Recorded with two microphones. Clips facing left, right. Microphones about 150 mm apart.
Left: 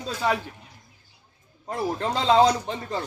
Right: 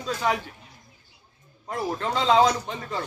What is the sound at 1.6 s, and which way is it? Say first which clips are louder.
A man's voice: left 1 dB; 35° left (ahead or behind).